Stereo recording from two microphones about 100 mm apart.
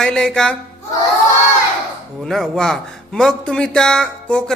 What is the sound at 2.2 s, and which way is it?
Music, 5° left (ahead or behind).